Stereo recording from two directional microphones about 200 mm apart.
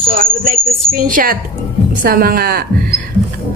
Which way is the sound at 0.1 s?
45° right (ahead or behind).